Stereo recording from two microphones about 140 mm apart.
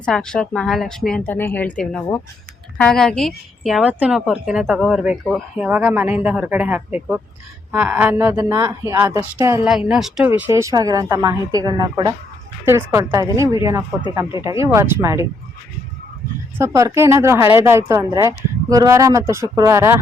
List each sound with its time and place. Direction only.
0.0 s a woman's voice: 5° left (ahead or behind); by 9.6 s 20° right (ahead or behind)
9.6 s a woman's voice: 5° right (ahead or behind)
16.6 s speech: 20° right (ahead or behind)